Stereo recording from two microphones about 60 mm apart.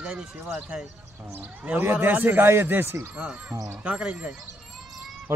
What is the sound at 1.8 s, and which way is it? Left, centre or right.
Speech, right.